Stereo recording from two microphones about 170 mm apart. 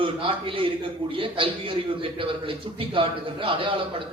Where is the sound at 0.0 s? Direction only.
30° right (ahead or behind).